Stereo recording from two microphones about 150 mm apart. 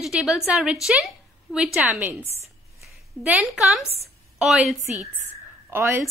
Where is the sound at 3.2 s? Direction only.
5° right (ahead or behind).